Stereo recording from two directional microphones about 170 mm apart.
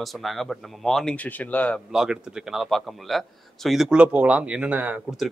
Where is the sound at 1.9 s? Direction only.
5° right (ahead or behind).